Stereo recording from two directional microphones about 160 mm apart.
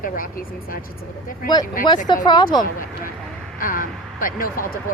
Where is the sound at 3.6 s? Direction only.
60° left (ahead or behind).